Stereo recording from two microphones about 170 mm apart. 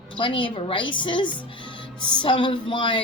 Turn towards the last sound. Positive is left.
turn(degrees=30)  # may be behind; listen again after turning